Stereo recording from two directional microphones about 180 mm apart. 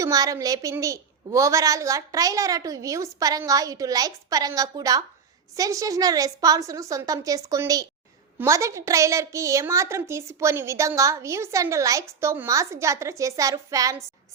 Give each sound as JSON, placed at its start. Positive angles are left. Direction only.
{"t": 0.0, "sound": "a woman's voice", "side_deg": -20}